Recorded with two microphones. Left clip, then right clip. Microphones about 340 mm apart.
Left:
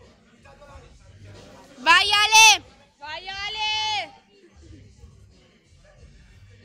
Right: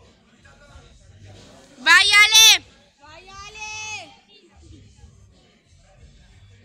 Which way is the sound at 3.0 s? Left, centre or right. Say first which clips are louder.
Left 9 dB; left.